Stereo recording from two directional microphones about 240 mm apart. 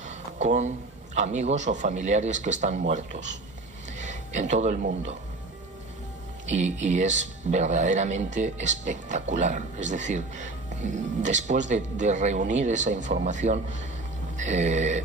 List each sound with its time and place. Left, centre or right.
0.0 s a man's voice: right
6.5 s a man's voice: right